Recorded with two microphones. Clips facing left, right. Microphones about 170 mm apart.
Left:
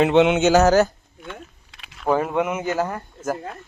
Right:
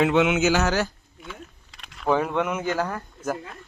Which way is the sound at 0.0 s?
25° left (ahead or behind).